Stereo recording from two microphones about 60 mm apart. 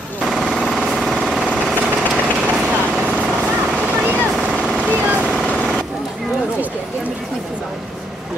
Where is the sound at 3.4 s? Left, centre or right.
Centre.